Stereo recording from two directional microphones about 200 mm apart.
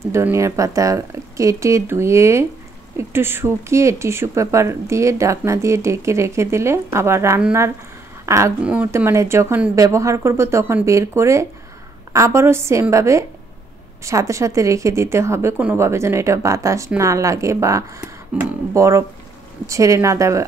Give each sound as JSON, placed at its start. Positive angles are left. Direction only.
{"t": 0.1, "sound": "speech", "side_deg": -15}